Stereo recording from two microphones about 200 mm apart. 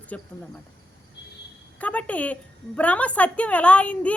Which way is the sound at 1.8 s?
5° left (ahead or behind).